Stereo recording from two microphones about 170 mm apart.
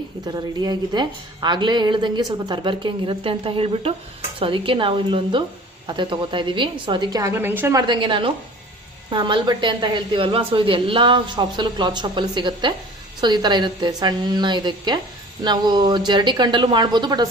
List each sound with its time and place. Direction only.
0.3 s a woman's voice: 25° right (ahead or behind)
7.8 s a woman's voice: 30° right (ahead or behind)